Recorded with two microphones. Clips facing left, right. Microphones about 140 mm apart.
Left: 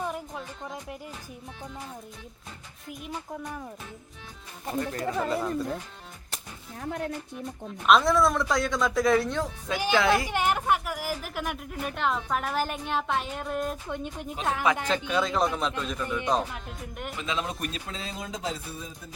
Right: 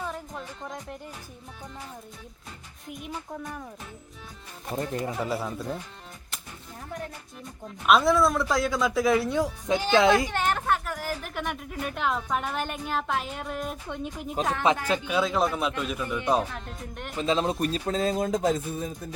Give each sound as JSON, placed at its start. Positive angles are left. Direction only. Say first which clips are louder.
{"t": 0.3, "sound": "a woman's voice", "louder": "even", "side_deg": 5}
{"t": 2.8, "sound": "a woman's voice", "louder": "right 1 dB", "side_deg": 0}
{"t": 4.8, "sound": "speech", "louder": "even", "side_deg": -25}
{"t": 5.2, "sound": "a woman's voice", "louder": "left 2 dB", "side_deg": -5}
{"t": 7.9, "sound": "a woman's voice", "louder": "even", "side_deg": -5}
{"t": 10.3, "sound": "a woman's voice", "louder": "left 1 dB", "side_deg": 10}
{"t": 16.5, "sound": "a woman's voice", "louder": "right 1 dB", "side_deg": 5}
{"t": 17.2, "sound": "speech", "louder": "right 8 dB", "side_deg": -35}